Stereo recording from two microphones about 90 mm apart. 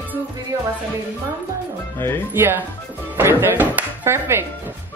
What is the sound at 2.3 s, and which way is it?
Speech, 25° right (ahead or behind).